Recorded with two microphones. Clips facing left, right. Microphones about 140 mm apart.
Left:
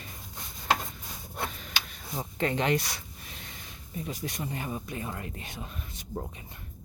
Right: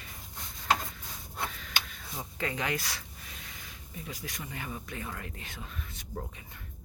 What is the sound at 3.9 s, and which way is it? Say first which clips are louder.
Speech: left 6 dB; 30° left (ahead or behind).